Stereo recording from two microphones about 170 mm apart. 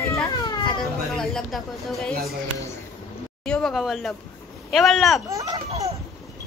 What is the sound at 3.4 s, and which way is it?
Speech, 5° left (ahead or behind).